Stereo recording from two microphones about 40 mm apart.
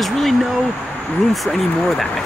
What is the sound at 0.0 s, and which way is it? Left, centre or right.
Speech, centre.